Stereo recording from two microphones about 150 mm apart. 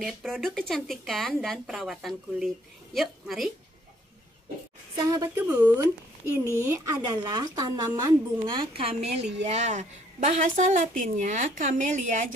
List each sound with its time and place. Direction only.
0.0 s speech: centre (ahead or behind)
4.9 s speech: 25° right (ahead or behind)
5.3 s speech: 10° right (ahead or behind)
8.5 s a woman's voice: 35° right (ahead or behind)
9.4 s a woman's voice: 50° right (ahead or behind)